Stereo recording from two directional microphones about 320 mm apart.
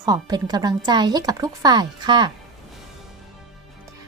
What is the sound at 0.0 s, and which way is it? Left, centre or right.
Speech, centre.